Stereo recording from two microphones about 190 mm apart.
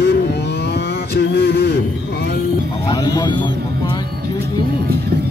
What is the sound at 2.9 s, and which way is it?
Speech, 20° left (ahead or behind).